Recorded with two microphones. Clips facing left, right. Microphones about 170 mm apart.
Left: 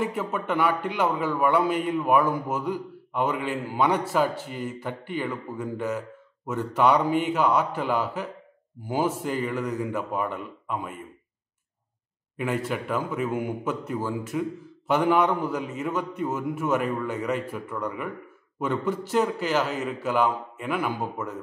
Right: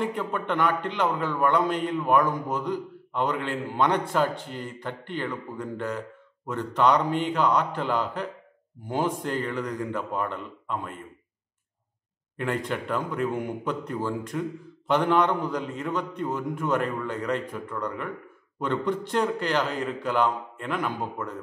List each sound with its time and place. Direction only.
0.0 s a man's voice: 5° left (ahead or behind)
12.4 s a man's voice: 5° left (ahead or behind)